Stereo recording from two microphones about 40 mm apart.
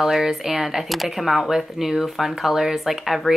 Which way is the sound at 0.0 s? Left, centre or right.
Centre.